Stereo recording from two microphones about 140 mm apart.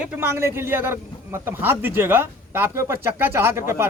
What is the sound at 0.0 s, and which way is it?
A man's voice, 15° right (ahead or behind).